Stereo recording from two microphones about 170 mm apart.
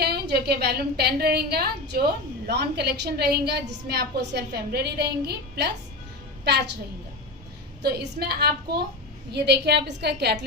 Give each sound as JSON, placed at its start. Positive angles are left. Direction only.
{"t": 0.0, "sound": "a woman's voice", "side_deg": -70}
{"t": 7.8, "sound": "a woman's voice", "side_deg": -70}